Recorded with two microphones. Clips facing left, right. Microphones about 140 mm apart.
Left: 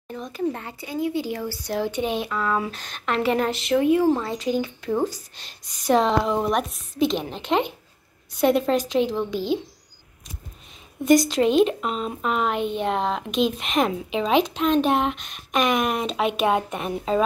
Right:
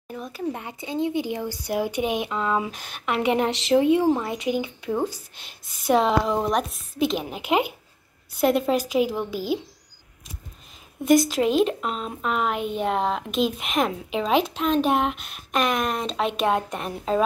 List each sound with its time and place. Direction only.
0.1 s speech: 5° right (ahead or behind)
11.1 s speech: 5° right (ahead or behind)